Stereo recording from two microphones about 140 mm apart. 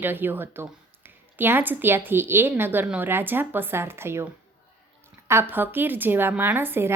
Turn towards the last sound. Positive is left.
turn(degrees=-15)  # may be behind; listen again after turning